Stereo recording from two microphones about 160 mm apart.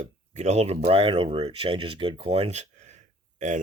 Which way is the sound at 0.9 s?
35° right (ahead or behind).